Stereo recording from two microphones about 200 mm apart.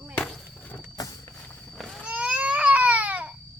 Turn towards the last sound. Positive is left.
turn(degrees=-5)  # may be behind; listen again after turning